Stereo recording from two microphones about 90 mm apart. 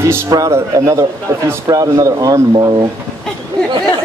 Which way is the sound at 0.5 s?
35° right (ahead or behind).